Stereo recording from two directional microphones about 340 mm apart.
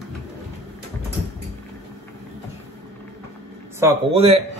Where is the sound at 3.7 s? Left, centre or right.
Centre.